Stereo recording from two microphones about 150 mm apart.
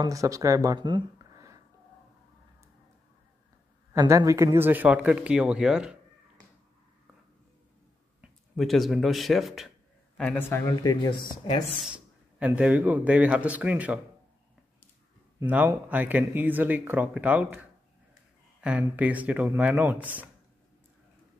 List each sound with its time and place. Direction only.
0.0 s speech: 20° right (ahead or behind)
3.9 s speech: 20° right (ahead or behind); by 5.9 s 5° right (ahead or behind)
8.2 s a man's voice: centre (ahead or behind)
10.5 s speech: 25° left (ahead or behind)
11.8 s speech: 10° right (ahead or behind)
15.3 s speech: 10° right (ahead or behind)